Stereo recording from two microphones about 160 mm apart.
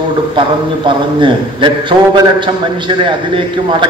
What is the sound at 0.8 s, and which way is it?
A man's voice, 30° right (ahead or behind).